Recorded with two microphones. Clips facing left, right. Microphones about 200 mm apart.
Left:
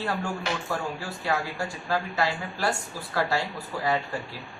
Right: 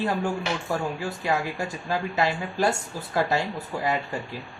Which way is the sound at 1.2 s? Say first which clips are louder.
Right 1 dB; 20° right (ahead or behind).